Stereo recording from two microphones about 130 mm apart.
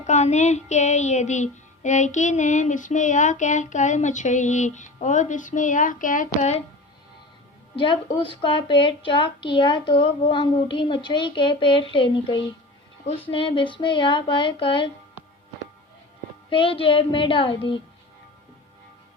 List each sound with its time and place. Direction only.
0.0 s music: 60° left (ahead or behind); by 6.6 s 75° left (ahead or behind)
7.8 s a woman's voice: 40° left (ahead or behind)
16.5 s speech: 45° left (ahead or behind)